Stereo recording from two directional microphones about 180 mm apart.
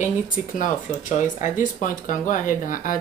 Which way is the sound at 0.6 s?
45° left (ahead or behind).